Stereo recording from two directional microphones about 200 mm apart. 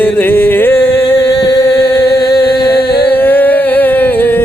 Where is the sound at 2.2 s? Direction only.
55° left (ahead or behind).